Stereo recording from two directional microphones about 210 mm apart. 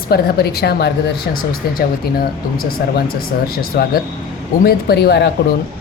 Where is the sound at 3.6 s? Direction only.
45° left (ahead or behind).